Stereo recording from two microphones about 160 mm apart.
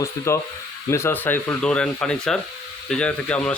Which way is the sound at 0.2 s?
20° left (ahead or behind).